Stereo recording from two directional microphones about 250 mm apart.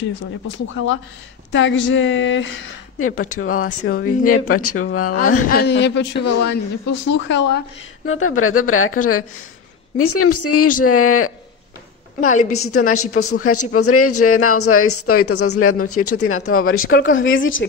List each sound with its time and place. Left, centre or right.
0.5 s a man's voice: left
5.4 s a man's voice: left
8.2 s speech: left
12.5 s speech: left
16.9 s speech: left
17.2 s a man's voice: left